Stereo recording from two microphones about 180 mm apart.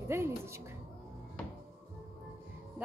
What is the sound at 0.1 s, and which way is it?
Speech, 15° right (ahead or behind).